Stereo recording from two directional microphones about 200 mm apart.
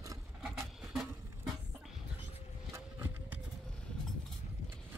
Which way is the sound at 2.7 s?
10° right (ahead or behind).